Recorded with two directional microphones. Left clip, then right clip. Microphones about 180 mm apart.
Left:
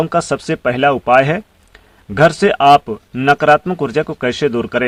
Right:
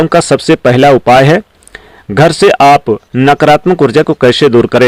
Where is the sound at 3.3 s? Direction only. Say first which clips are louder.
Right 4 dB; 50° right (ahead or behind).